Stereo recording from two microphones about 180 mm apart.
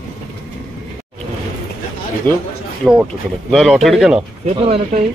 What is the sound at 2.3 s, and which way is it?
Speech, 10° left (ahead or behind).